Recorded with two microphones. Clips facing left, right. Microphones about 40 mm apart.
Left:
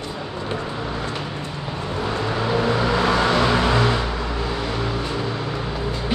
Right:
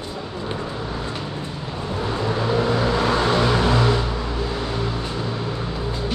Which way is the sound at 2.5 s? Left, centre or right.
Left.